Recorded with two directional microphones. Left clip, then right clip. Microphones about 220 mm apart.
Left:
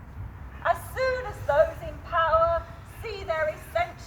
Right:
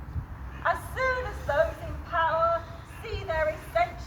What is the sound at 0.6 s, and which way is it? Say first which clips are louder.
Music: left 1 dB; 45° left (ahead or behind).